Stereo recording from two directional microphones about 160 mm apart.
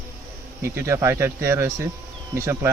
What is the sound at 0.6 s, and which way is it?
Speech, 15° right (ahead or behind).